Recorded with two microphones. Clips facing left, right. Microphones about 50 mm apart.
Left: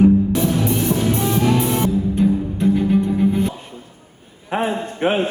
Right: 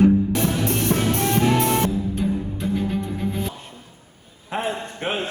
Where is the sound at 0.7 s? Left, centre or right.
Right.